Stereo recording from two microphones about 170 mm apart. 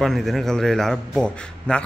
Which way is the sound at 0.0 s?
Centre (ahead or behind).